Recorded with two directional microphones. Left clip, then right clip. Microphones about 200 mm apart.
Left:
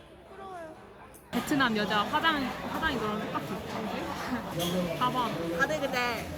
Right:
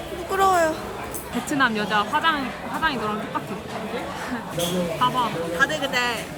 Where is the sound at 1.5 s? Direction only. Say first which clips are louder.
Right 6 dB; 5° right (ahead or behind).